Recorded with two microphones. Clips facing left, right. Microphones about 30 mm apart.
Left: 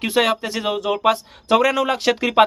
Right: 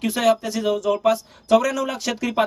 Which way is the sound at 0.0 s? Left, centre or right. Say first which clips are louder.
Left 1 dB; left.